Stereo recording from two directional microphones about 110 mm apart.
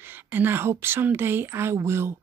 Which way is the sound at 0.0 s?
20° right (ahead or behind).